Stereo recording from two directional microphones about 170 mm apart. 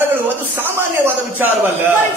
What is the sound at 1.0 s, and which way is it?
Speech, 15° right (ahead or behind).